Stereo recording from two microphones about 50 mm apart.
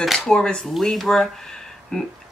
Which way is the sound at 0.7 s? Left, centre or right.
Centre.